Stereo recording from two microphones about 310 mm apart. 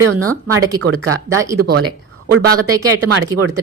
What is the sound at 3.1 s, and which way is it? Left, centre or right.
Speech, right.